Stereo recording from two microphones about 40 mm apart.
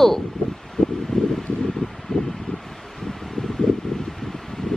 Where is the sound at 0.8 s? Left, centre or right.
Left.